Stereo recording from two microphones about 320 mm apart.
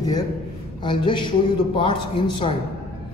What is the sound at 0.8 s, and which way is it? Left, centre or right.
A woman's voice, centre.